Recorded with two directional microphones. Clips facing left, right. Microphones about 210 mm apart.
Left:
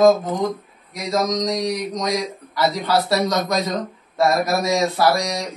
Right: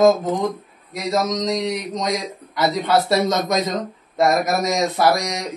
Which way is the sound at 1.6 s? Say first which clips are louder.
Even; 25° right (ahead or behind).